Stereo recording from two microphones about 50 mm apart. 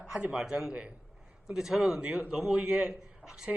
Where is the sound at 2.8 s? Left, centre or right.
Centre.